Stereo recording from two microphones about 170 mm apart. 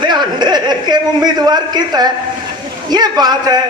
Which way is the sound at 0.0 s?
25° right (ahead or behind).